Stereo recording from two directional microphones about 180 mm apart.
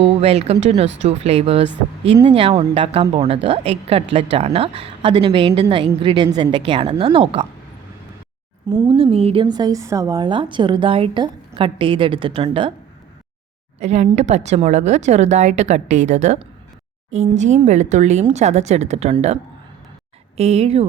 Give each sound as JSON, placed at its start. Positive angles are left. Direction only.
{"t": 0.2, "sound": "a woman's voice", "side_deg": -35}
{"t": 8.7, "sound": "a woman's voice", "side_deg": -25}
{"t": 13.7, "sound": "a woman's voice", "side_deg": -40}